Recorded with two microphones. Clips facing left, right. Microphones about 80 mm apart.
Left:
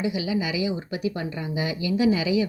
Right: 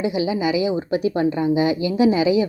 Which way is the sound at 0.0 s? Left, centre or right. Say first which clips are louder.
Right 5 dB; right.